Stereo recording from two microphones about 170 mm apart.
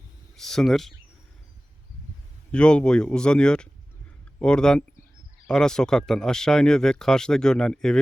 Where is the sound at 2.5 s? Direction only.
5° left (ahead or behind).